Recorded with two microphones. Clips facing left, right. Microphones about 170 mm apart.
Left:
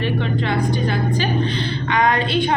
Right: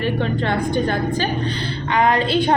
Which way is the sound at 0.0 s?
45° right (ahead or behind).